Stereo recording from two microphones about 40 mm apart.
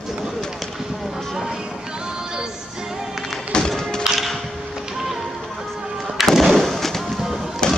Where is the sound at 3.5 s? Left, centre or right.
Centre.